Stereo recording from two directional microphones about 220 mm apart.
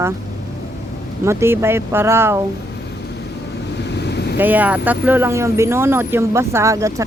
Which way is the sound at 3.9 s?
50° left (ahead or behind).